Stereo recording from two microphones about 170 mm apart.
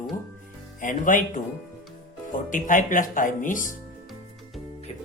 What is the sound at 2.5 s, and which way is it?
Speech, 50° left (ahead or behind).